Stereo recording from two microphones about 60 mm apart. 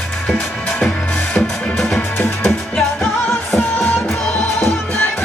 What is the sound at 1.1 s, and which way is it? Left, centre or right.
Music, left.